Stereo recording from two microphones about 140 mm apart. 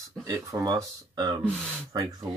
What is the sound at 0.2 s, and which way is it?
Speech, 25° right (ahead or behind).